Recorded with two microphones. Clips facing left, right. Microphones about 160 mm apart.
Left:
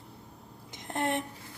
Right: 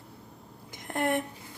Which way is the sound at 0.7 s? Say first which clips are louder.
Right 3 dB; 20° left (ahead or behind).